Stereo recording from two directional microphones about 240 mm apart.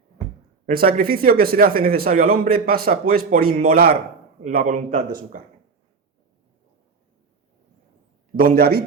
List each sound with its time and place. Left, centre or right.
0.6 s speech: right
8.4 s speech: right